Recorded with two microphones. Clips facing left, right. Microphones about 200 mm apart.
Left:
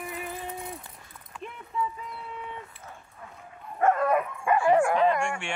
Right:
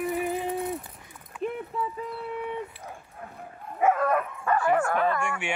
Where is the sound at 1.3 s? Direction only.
5° right (ahead or behind).